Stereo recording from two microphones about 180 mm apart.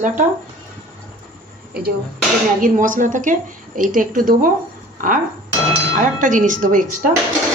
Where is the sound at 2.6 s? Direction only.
50° right (ahead or behind).